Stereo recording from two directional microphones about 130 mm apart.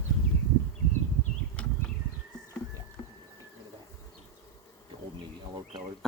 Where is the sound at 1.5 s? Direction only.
10° left (ahead or behind).